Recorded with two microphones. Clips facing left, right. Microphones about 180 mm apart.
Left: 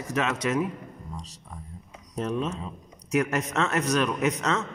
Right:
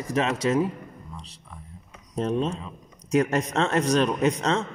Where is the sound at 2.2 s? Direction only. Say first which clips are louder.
Right 3 dB; 35° right (ahead or behind).